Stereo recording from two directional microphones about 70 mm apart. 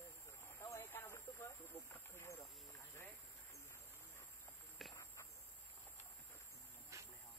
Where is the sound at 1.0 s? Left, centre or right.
Left.